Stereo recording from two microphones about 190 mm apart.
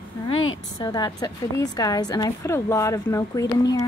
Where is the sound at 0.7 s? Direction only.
20° left (ahead or behind).